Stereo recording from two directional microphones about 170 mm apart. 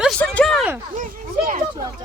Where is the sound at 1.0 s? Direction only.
50° right (ahead or behind).